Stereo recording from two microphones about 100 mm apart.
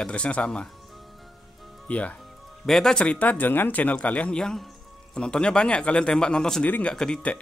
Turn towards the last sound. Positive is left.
turn(degrees=10)  # may be behind; listen again after turning